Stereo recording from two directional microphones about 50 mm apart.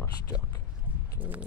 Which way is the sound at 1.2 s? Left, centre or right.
Right.